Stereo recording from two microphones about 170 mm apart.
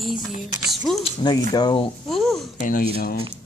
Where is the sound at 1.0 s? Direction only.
25° left (ahead or behind).